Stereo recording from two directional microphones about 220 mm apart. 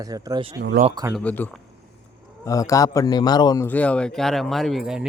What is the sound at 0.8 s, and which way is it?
Speech, 20° right (ahead or behind).